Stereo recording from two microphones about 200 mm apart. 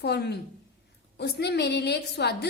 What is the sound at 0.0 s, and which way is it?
A woman's voice, 55° left (ahead or behind).